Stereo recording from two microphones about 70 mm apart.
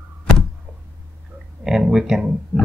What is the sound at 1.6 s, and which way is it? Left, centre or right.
Speech, centre.